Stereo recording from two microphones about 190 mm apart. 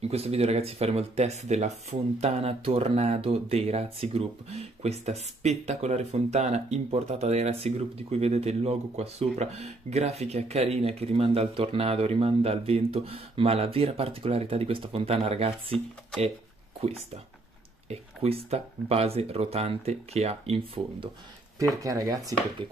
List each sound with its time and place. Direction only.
0.0 s speech: 35° right (ahead or behind)
17.8 s speech: 35° right (ahead or behind)
21.5 s speech: 15° right (ahead or behind)